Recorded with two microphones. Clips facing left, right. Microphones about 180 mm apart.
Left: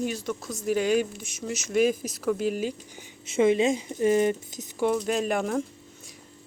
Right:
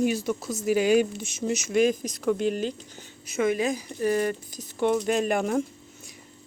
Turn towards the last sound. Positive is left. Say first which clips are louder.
# right 2 dB
turn(degrees=0)  # may be behind; listen again after turning